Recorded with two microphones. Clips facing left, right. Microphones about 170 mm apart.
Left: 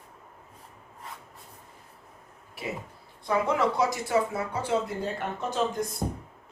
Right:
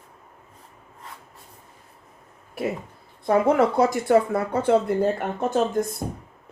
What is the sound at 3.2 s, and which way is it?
Speech, 55° right (ahead or behind).